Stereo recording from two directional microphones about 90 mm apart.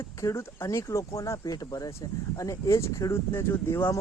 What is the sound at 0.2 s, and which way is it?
Speech, 30° left (ahead or behind).